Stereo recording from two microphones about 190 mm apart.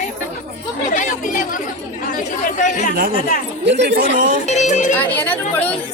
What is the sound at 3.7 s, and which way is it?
Speech, 65° right (ahead or behind).